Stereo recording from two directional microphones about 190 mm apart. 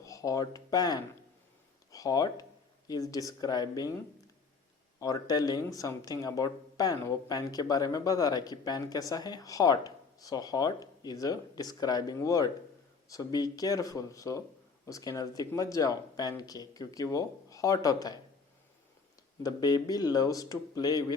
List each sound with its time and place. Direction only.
0.0 s speech: 20° left (ahead or behind)
4.9 s speech: 20° left (ahead or behind)
19.4 s speech: 20° left (ahead or behind)